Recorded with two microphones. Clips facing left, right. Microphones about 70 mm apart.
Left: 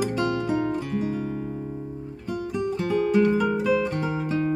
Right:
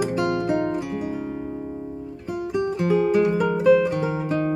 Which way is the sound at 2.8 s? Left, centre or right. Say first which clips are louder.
Right 2 dB; centre.